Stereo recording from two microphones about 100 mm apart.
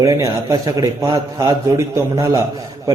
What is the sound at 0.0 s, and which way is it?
A man's voice, 35° right (ahead or behind).